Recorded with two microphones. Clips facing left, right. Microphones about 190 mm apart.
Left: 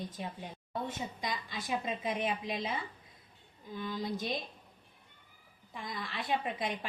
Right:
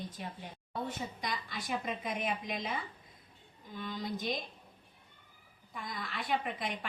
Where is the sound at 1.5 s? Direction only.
25° left (ahead or behind).